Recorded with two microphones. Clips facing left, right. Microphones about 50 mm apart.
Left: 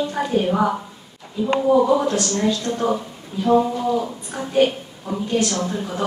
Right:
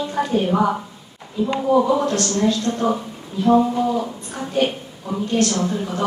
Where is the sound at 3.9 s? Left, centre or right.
Centre.